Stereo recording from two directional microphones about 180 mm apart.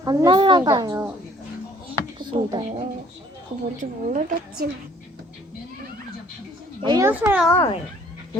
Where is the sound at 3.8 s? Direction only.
45° right (ahead or behind).